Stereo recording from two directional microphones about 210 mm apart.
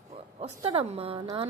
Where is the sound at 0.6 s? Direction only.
25° right (ahead or behind).